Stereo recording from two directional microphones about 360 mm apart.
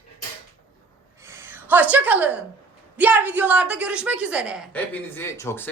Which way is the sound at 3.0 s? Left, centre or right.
Centre.